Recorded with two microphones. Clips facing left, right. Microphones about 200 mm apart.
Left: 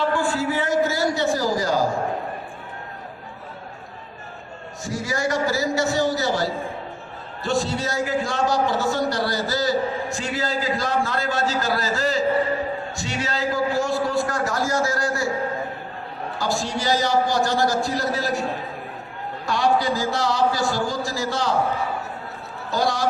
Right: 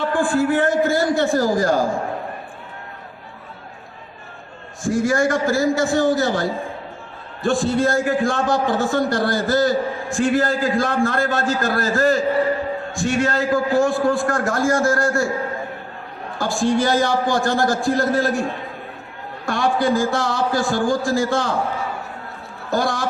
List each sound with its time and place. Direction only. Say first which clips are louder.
0.1 s a man's voice: right 5 dB; 50° right (ahead or behind)
4.8 s a man's voice: right 8 dB; 50° right (ahead or behind)
16.4 s a man's voice: right 7 dB; 50° right (ahead or behind)
19.5 s a man's voice: right 2 dB; 50° right (ahead or behind)
22.7 s a man's voice: right 2 dB; 50° right (ahead or behind)